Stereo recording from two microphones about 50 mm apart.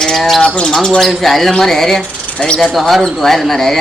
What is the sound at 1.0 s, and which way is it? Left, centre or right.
Speech, centre.